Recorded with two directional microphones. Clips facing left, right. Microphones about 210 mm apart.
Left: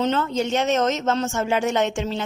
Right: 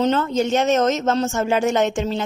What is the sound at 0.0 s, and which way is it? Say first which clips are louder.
Speech: right 3 dB; 40° right (ahead or behind).